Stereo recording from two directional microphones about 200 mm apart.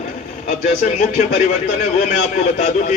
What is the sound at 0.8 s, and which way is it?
A man's voice, 35° left (ahead or behind).